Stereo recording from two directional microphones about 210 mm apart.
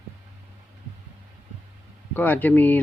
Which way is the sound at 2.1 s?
10° left (ahead or behind).